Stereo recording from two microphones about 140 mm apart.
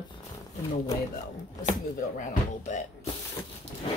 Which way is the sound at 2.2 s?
60° left (ahead or behind).